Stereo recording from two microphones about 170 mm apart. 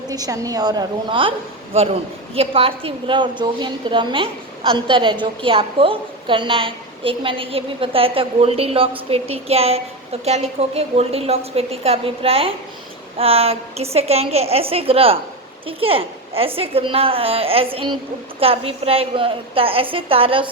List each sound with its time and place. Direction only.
0.1 s a woman's voice: 20° right (ahead or behind)